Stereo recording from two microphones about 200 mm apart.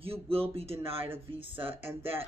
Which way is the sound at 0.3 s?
30° right (ahead or behind).